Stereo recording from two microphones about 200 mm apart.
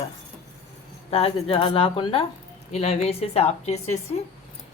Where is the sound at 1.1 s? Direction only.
30° left (ahead or behind).